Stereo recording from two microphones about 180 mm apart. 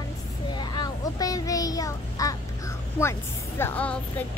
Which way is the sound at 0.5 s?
25° left (ahead or behind).